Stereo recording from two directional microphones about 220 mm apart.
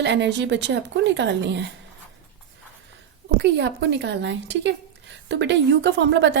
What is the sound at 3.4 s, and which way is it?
A woman's voice, 50° right (ahead or behind).